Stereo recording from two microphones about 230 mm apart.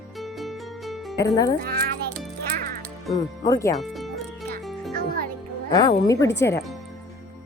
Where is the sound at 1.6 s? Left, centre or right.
Right.